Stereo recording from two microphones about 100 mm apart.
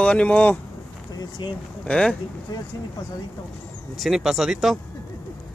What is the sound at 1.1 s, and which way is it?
Speech, 45° left (ahead or behind).